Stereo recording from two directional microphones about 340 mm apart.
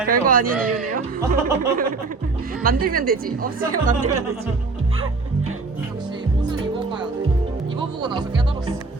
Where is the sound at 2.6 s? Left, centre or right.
Right.